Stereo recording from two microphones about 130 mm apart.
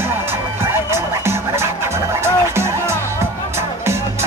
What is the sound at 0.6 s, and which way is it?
Music, 20° right (ahead or behind).